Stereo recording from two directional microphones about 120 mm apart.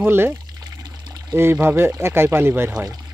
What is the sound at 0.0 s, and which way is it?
Speech, 20° right (ahead or behind).